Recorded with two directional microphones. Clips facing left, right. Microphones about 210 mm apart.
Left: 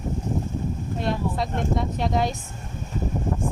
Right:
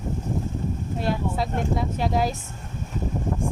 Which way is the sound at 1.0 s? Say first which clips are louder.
Even; 5° right (ahead or behind).